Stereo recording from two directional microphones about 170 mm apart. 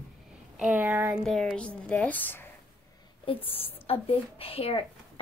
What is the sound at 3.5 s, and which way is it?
A woman's voice, 35° left (ahead or behind).